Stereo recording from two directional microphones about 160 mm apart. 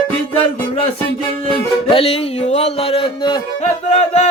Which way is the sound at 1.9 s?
35° left (ahead or behind).